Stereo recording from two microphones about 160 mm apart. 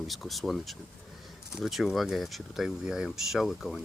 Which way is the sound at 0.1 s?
Centre (ahead or behind).